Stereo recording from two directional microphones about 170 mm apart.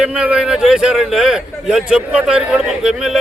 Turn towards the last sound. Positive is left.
turn(degrees=-5)  # may be behind; listen again after turning